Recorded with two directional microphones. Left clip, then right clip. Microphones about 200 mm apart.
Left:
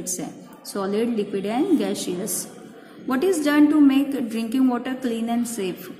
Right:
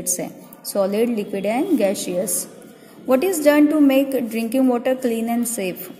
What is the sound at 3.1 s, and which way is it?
A woman's voice, 25° right (ahead or behind).